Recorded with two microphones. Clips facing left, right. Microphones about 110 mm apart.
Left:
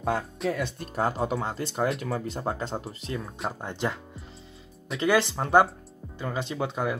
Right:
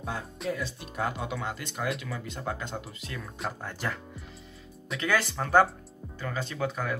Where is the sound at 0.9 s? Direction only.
35° left (ahead or behind).